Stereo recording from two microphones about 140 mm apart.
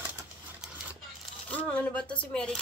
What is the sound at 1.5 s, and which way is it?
Speech, 10° left (ahead or behind).